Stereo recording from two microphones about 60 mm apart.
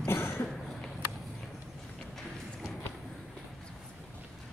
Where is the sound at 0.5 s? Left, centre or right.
Centre.